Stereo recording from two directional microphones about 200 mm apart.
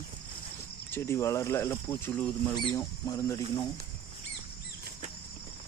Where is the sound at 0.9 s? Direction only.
10° left (ahead or behind).